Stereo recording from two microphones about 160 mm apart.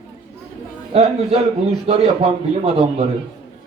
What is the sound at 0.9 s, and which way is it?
A man's voice, 35° right (ahead or behind).